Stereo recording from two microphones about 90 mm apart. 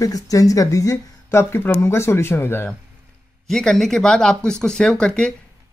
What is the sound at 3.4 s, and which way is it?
Speech, 5° left (ahead or behind).